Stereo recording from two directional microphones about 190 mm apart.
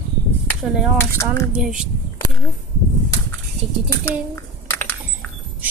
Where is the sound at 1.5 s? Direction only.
5° right (ahead or behind).